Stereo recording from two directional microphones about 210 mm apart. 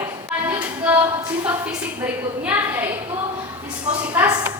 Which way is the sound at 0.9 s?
5° right (ahead or behind).